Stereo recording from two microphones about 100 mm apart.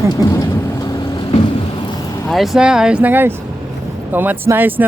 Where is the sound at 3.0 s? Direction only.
20° right (ahead or behind).